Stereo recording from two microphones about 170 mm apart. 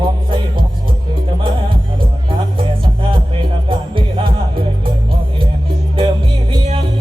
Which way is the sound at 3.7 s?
30° right (ahead or behind).